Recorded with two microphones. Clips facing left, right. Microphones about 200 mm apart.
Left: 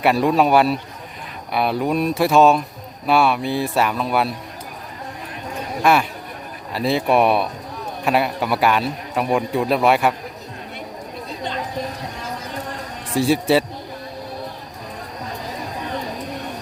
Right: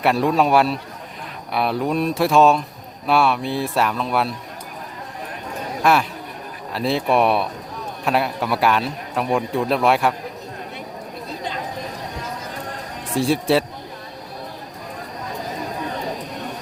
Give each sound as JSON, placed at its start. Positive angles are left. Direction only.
{"t": 0.0, "sound": "a man's voice", "side_deg": 0}
{"t": 5.8, "sound": "a man's voice", "side_deg": 0}
{"t": 13.1, "sound": "a man's voice", "side_deg": 0}